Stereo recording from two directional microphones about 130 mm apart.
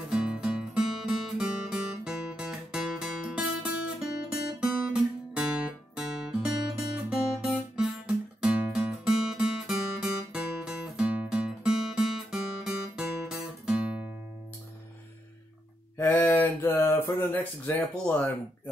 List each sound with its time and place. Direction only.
0.1 s music: 5° right (ahead or behind)
5.3 s guitar: 5° right (ahead or behind)
8.4 s music: 5° right (ahead or behind)
16.0 s speech: 15° left (ahead or behind)